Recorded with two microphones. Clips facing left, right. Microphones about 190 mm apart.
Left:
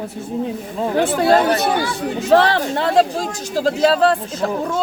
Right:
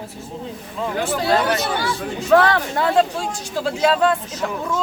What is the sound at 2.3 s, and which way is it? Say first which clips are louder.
Speech: left 1 dB; 30° left (ahead or behind).